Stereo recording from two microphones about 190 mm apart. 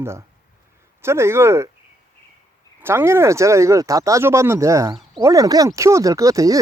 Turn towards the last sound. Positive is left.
turn(degrees=-15)  # may be behind; listen again after turning